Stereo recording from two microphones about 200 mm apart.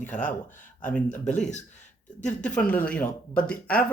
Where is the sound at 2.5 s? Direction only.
5° left (ahead or behind).